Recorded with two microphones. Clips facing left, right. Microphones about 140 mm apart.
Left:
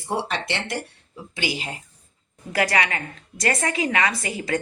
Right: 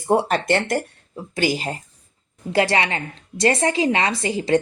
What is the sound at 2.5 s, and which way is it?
A woman's voice, 25° right (ahead or behind).